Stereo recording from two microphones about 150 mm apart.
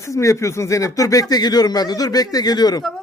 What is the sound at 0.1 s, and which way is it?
Speech, 20° left (ahead or behind).